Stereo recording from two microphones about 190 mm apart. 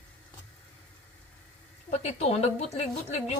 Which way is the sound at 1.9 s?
35° left (ahead or behind).